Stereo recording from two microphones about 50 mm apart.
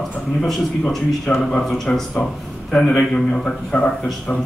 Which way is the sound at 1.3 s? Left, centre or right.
Centre.